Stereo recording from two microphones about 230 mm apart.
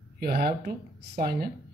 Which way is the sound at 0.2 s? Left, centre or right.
Right.